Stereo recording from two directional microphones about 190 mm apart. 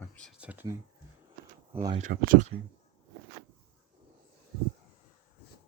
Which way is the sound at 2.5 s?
55° right (ahead or behind).